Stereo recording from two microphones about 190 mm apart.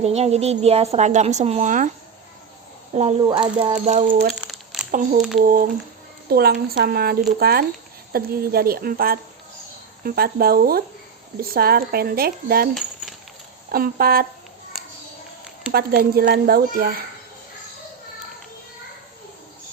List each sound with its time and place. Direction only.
0.0 s a woman's voice: 35° right (ahead or behind)
2.9 s speech: 35° right (ahead or behind)
3.2 s a woman's voice: 25° right (ahead or behind); by 4.3 s 45° right (ahead or behind)
4.4 s crumpling: centre (ahead or behind)
4.9 s speech: 40° right (ahead or behind)
13.7 s speech: 50° right (ahead or behind)
15.7 s speech: 55° right (ahead or behind)